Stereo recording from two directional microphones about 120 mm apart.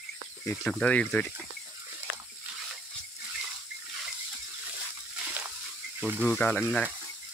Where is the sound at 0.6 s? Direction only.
10° left (ahead or behind).